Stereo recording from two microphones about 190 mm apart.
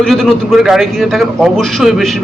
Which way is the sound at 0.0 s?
Centre (ahead or behind).